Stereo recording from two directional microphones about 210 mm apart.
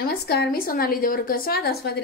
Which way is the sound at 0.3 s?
45° left (ahead or behind).